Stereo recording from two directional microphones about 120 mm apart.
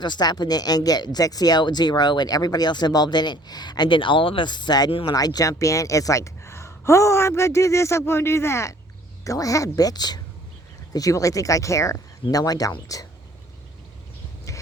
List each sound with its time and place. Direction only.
0.0 s speech: 35° left (ahead or behind)
4.9 s speech: 50° left (ahead or behind)
5.1 s speech: 30° left (ahead or behind)